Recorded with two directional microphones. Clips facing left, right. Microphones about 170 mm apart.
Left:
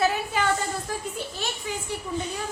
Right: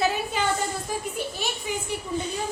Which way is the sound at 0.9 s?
15° right (ahead or behind).